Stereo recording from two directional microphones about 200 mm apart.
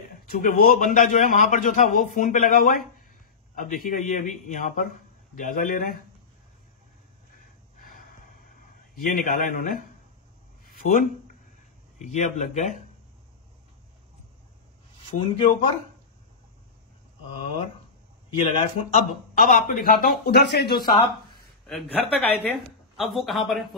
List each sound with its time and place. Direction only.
0.3 s a man's voice: 45° left (ahead or behind)
8.9 s a man's voice: 45° left (ahead or behind)
10.6 s a sound: 45° left (ahead or behind)
12.0 s a man's voice: 35° left (ahead or behind)
15.0 s a man's voice: 25° left (ahead or behind)
17.3 s a man's voice: 25° left (ahead or behind); by 20.9 s 50° left (ahead or behind)
21.6 s a man's voice: 5° left (ahead or behind)